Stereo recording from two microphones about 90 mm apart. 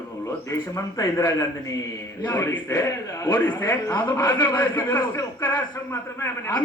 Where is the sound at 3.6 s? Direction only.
35° left (ahead or behind).